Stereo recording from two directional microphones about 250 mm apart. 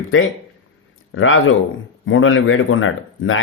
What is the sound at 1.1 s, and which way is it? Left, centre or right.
Speech, left.